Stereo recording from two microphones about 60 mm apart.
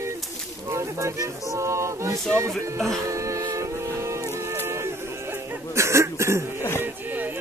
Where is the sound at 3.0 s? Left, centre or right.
Right.